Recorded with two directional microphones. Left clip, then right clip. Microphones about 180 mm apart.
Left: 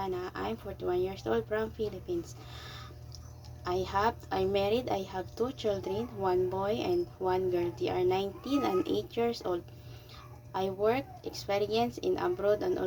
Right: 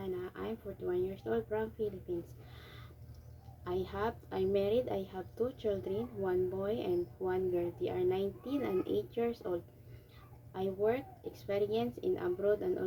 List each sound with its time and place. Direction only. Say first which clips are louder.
0.0 s speech: left 5 dB; 15° right (ahead or behind)
3.6 s a woman's voice: left 7 dB; 15° right (ahead or behind)